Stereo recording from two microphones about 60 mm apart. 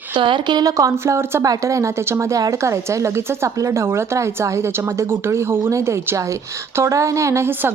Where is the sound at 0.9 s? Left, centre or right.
Right.